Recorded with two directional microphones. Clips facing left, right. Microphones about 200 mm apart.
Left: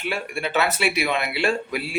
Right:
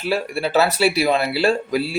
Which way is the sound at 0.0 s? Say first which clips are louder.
Right 6 dB; 35° right (ahead or behind).